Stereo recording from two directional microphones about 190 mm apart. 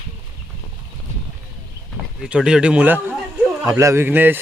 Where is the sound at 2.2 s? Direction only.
5° right (ahead or behind).